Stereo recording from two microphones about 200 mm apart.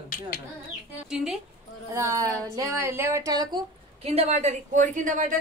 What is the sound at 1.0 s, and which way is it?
Speech, centre (ahead or behind).